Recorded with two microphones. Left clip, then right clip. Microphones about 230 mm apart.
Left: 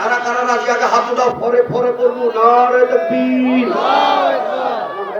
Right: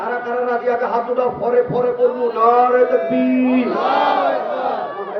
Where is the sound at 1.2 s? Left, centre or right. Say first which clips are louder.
Left 3 dB; left.